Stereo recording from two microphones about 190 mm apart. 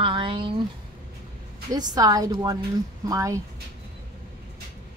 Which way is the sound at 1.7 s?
20° right (ahead or behind).